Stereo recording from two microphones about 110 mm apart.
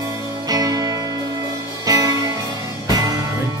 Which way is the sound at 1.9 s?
35° right (ahead or behind).